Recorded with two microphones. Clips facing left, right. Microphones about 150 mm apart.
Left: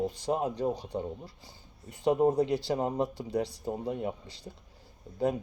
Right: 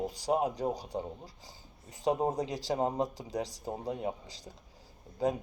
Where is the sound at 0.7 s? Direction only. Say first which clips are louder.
Left 2 dB; 35° right (ahead or behind).